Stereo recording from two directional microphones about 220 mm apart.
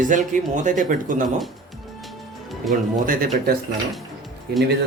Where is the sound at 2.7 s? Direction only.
40° right (ahead or behind).